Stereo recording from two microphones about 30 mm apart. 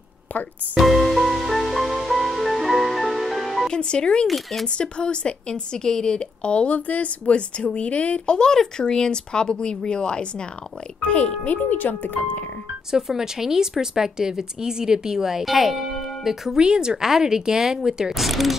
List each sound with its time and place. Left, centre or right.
0.7 s music: centre
3.6 s speech: left
4.3 s speech: centre
4.6 s speech: left
6.1 s speech: left
6.7 s a woman's voice: left
7.5 s a woman's voice: left
8.3 s speech: left
11.0 s a woman's voice: left
11.4 s a woman's voice: left
12.9 s speech: centre
15.4 s speech: centre
16.5 s speech: right
18.1 s speech: centre